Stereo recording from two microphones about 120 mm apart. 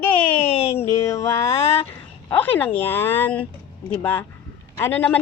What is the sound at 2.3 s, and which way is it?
Speech, 15° left (ahead or behind).